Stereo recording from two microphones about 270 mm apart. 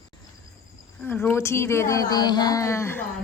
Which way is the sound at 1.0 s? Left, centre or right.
Centre.